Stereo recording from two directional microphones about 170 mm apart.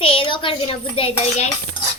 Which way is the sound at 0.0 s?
30° left (ahead or behind).